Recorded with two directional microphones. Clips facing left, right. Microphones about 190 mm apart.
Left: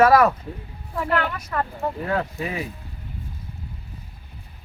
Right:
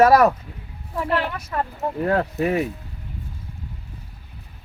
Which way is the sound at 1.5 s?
10° right (ahead or behind).